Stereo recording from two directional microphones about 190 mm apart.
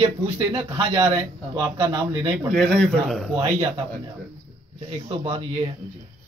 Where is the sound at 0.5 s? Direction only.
25° right (ahead or behind).